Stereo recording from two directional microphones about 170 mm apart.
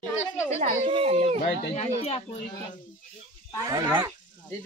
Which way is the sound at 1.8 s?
35° left (ahead or behind).